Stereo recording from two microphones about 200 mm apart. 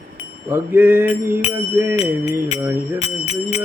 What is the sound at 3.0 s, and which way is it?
Music, 30° left (ahead or behind).